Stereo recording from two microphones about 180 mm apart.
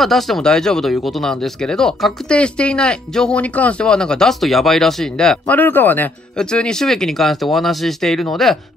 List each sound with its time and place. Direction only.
0.0 s speech: centre (ahead or behind)